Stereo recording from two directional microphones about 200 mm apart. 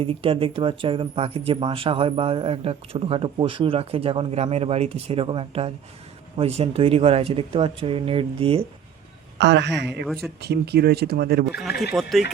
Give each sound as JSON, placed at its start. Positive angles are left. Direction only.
{"t": 0.0, "sound": "speech", "side_deg": -25}
{"t": 9.4, "sound": "a woman's voice", "side_deg": -60}
{"t": 11.9, "sound": "speech", "side_deg": 0}